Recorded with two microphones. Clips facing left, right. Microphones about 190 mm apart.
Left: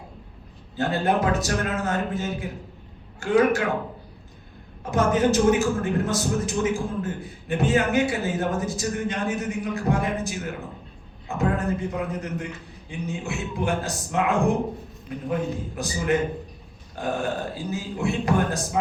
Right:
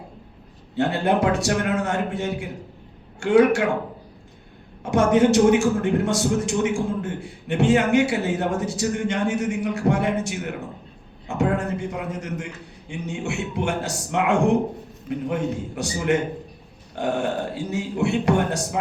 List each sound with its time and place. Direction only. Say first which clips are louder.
0.8 s a man's voice: right 2 dB; 75° right (ahead or behind)
4.8 s a man's voice: right 4 dB; 75° right (ahead or behind)
12.9 s a man's voice: right 2 dB; 70° right (ahead or behind)